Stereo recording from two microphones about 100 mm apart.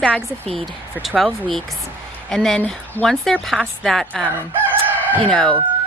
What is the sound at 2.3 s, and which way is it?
Speech, 5° left (ahead or behind).